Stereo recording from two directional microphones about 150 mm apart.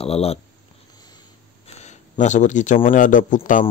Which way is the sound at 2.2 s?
55° left (ahead or behind).